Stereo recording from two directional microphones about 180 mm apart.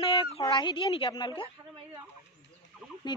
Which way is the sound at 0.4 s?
25° left (ahead or behind).